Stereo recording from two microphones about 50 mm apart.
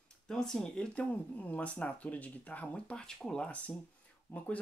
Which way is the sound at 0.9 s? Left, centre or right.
Left.